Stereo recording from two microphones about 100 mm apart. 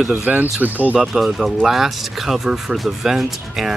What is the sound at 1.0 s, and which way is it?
Speech, centre (ahead or behind).